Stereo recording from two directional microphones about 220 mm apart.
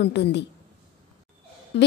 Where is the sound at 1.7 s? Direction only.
50° left (ahead or behind).